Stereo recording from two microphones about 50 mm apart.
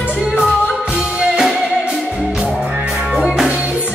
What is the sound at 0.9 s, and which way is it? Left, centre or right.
Music, centre.